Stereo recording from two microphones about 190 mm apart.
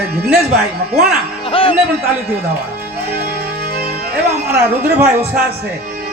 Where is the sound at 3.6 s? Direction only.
55° right (ahead or behind).